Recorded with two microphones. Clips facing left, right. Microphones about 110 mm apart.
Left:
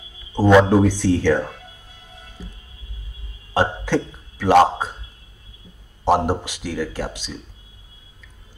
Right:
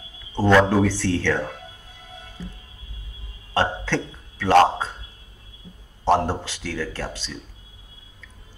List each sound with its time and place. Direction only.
0.3 s a man's voice: 15° left (ahead or behind)
6.0 s a man's voice: 15° left (ahead or behind)